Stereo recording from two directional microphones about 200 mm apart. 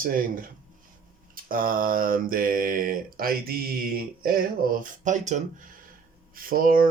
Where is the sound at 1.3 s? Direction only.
45° right (ahead or behind).